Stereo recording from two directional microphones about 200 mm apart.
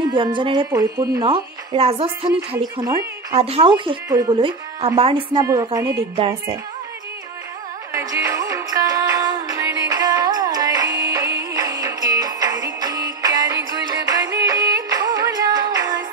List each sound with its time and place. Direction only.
0.0 s speech: 25° right (ahead or behind)
2.8 s speech: 20° right (ahead or behind)
3.3 s speech: 30° right (ahead or behind)
7.9 s music: 15° right (ahead or behind)